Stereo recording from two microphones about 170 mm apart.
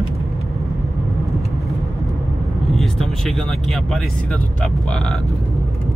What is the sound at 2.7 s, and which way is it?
Speech, centre (ahead or behind).